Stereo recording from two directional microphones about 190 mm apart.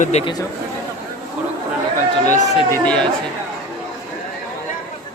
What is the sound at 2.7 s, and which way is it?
Speech, 5° left (ahead or behind).